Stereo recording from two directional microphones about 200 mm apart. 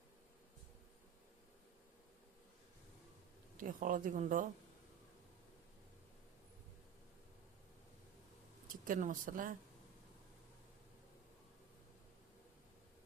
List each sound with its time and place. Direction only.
3.6 s a woman's voice: 40° right (ahead or behind)
8.6 s speech: 45° right (ahead or behind)